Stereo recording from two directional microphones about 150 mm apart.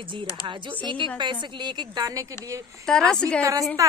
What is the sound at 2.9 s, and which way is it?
Speech, 5° left (ahead or behind).